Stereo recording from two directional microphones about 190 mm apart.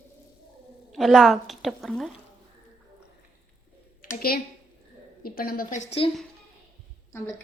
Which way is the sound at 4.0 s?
50° left (ahead or behind).